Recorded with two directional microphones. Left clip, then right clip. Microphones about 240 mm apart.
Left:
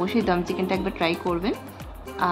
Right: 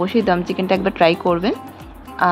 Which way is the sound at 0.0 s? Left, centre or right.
Centre.